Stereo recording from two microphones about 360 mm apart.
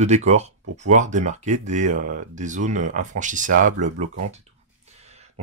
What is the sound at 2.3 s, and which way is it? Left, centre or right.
Speech, centre.